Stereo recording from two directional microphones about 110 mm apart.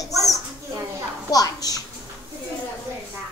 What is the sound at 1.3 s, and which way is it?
Speech, 35° left (ahead or behind).